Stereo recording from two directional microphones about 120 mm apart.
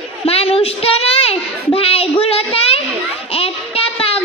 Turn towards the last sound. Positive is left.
turn(degrees=55)  # may be behind; listen again after turning